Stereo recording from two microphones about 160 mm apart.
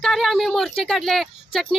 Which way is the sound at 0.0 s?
Centre (ahead or behind).